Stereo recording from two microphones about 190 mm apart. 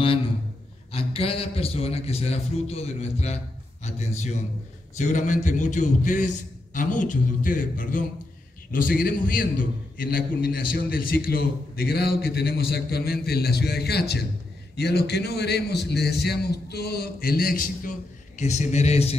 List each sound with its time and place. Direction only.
0.9 s a man's voice: 30° left (ahead or behind); by 17.9 s 50° left (ahead or behind)
18.4 s a man's voice: 35° left (ahead or behind)